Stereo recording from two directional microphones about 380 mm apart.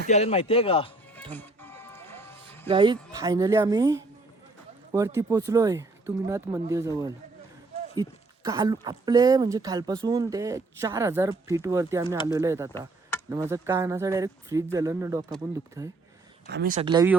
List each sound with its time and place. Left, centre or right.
0.1 s speech: centre
1.3 s music: centre
2.6 s speech: centre
16.5 s speech: right